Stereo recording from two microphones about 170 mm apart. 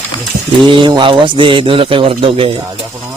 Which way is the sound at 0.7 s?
30° right (ahead or behind).